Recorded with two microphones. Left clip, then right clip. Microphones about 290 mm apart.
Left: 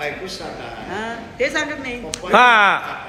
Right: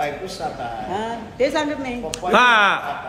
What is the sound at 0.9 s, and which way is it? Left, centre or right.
A woman's voice, centre.